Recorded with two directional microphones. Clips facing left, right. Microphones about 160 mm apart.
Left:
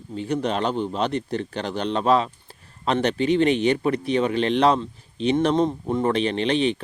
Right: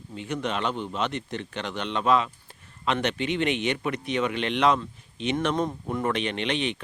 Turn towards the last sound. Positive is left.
turn(degrees=35)  # may be behind; listen again after turning